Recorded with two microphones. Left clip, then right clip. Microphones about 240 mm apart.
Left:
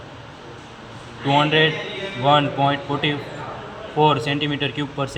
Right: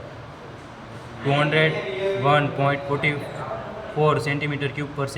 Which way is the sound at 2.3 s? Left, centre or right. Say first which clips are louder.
Left 3 dB; centre.